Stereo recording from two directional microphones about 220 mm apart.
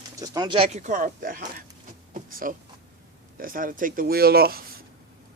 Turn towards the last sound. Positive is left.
turn(degrees=-45)  # may be behind; listen again after turning